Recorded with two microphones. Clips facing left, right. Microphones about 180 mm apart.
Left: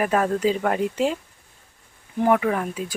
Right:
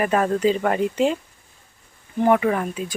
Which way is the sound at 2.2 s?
Centre (ahead or behind).